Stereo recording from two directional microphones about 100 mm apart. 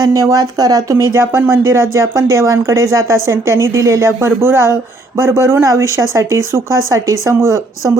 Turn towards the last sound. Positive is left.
turn(degrees=-30)  # may be behind; listen again after turning